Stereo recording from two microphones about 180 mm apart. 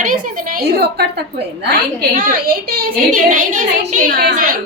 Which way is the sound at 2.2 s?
50° right (ahead or behind).